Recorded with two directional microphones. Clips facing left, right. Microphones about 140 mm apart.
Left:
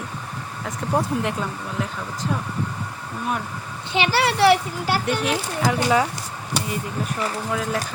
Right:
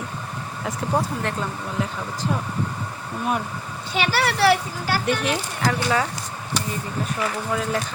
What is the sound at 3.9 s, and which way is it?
Speech, 20° left (ahead or behind).